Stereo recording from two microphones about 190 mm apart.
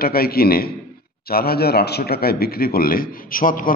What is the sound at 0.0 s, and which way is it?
A man's voice, 55° left (ahead or behind).